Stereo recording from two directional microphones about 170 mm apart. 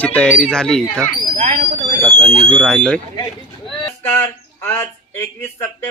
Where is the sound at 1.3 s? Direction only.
40° right (ahead or behind).